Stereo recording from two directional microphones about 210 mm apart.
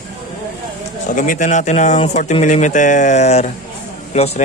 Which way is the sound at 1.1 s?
40° left (ahead or behind).